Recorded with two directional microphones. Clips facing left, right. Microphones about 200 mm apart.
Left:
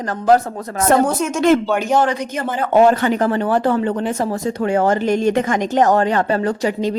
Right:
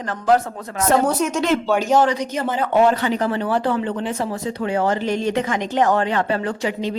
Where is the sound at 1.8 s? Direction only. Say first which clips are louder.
Even; 55° left (ahead or behind).